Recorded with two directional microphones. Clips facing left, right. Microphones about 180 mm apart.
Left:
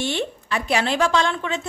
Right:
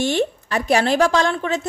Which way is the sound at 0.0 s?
45° right (ahead or behind).